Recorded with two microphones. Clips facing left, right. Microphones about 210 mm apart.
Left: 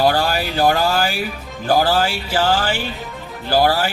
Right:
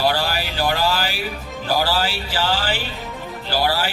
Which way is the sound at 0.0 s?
50° left (ahead or behind).